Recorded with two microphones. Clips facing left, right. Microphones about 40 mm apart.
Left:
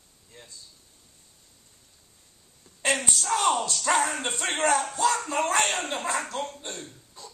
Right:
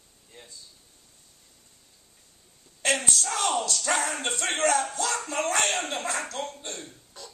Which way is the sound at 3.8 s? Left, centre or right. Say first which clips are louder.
Left 6 dB; left.